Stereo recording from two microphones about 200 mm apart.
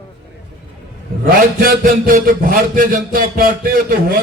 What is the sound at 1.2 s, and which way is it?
A man's voice, 45° right (ahead or behind).